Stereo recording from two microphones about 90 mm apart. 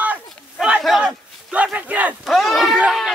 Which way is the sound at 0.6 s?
5° right (ahead or behind).